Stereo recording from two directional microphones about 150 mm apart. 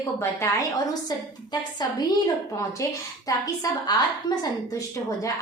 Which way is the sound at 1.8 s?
25° left (ahead or behind).